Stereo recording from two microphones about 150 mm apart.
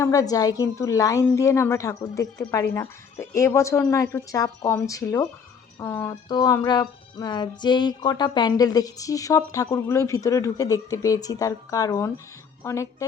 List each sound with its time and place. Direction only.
0.0 s speech: 20° left (ahead or behind)
6.2 s speech: 30° left (ahead or behind)